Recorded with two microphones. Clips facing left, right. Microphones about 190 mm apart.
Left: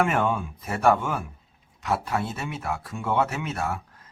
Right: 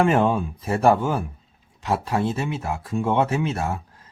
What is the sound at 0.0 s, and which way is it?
Speech, 30° right (ahead or behind).